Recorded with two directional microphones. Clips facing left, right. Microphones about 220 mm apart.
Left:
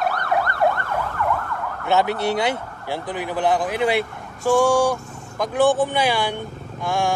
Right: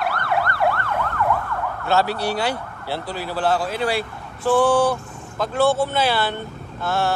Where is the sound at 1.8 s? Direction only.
20° left (ahead or behind).